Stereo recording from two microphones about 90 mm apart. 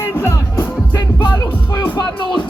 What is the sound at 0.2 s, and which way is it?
Music, 25° left (ahead or behind).